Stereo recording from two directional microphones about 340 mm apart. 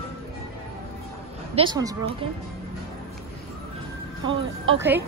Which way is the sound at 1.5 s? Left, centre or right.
Centre.